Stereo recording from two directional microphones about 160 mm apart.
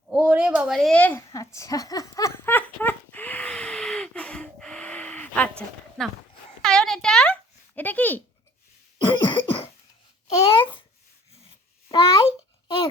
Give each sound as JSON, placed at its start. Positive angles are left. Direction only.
{"t": 0.1, "sound": "a sound", "side_deg": -10}
{"t": 6.0, "sound": "speech", "side_deg": 5}
{"t": 6.6, "sound": "a sound", "side_deg": 5}
{"t": 9.0, "sound": "throat clearing", "side_deg": 30}
{"t": 10.2, "sound": "babbling", "side_deg": 35}
{"t": 11.9, "sound": "babbling", "side_deg": 30}